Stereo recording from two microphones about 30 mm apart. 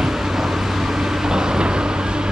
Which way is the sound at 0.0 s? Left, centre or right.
Centre.